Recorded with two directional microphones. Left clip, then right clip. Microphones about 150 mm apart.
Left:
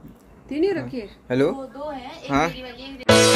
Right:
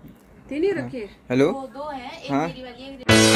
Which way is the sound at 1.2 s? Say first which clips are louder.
Right 1 dB; 10° right (ahead or behind).